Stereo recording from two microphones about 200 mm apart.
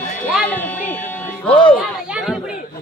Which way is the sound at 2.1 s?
5° right (ahead or behind).